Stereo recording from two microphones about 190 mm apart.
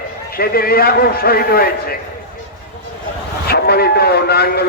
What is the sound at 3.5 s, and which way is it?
A man's voice, 55° left (ahead or behind).